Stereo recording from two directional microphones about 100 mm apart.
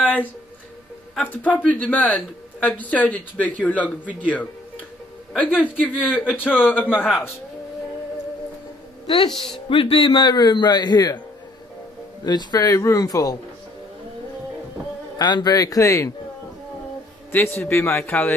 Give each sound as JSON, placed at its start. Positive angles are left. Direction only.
{"t": 0.0, "sound": "music", "side_deg": 15}
{"t": 1.2, "sound": "a man's voice", "side_deg": 20}
{"t": 5.4, "sound": "a man's voice", "side_deg": 15}
{"t": 9.0, "sound": "a woman's voice", "side_deg": 50}
{"t": 9.3, "sound": "speech", "side_deg": 0}
{"t": 9.7, "sound": "a man's voice", "side_deg": 65}
{"t": 12.3, "sound": "speech", "side_deg": 45}
{"t": 15.1, "sound": "speech", "side_deg": 45}
{"t": 17.3, "sound": "a man's voice", "side_deg": 20}
{"t": 18.0, "sound": "a man's voice", "side_deg": 15}